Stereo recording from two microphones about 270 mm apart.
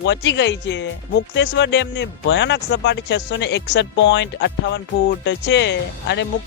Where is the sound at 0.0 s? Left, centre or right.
Left.